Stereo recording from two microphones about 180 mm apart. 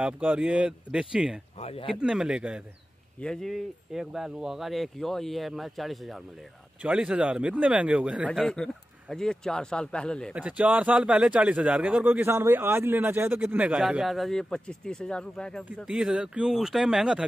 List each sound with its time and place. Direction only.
0.0 s speech: 5° right (ahead or behind)
1.6 s speech: 35° left (ahead or behind)
1.9 s speech: 5° right (ahead or behind)
10.3 s speech: 5° right (ahead or behind)